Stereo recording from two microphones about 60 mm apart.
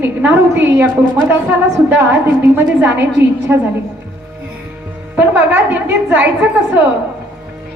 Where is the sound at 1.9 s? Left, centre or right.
Right.